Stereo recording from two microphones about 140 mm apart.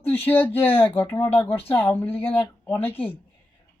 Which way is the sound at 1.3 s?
45° left (ahead or behind).